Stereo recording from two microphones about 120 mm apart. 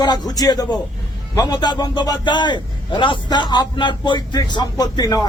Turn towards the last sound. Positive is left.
turn(degrees=30)  # may be behind; listen again after turning